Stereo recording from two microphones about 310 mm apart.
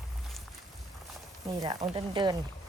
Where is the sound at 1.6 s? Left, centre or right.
Centre.